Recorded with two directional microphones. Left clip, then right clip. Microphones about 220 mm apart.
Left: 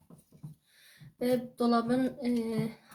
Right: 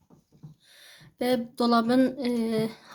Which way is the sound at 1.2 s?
50° right (ahead or behind).